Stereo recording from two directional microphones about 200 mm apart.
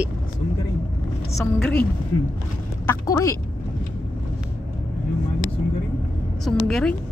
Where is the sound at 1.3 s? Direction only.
5° left (ahead or behind).